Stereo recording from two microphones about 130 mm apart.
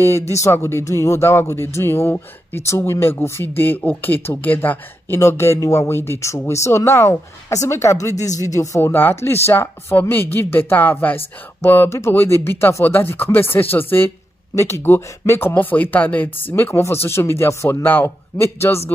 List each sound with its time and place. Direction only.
0.3 s speech: 20° left (ahead or behind)